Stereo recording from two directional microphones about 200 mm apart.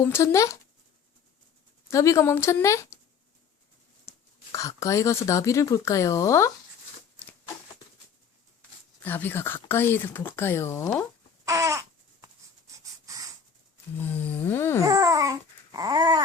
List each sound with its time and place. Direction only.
0.0 s speech: 15° left (ahead or behind)
1.9 s speech: 15° left (ahead or behind)
4.5 s speech: 15° left (ahead or behind)
7.2 s a sound: 10° left (ahead or behind)
9.0 s speech: 10° left (ahead or behind)
11.4 s baby cry: 15° right (ahead or behind)
12.7 s a sound: 15° right (ahead or behind)
14.0 s speech: 10° left (ahead or behind)
14.8 s babbling: 15° right (ahead or behind)